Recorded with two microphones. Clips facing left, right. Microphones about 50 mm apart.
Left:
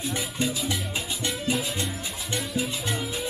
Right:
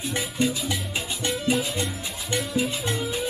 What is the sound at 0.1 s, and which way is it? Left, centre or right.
Music, centre.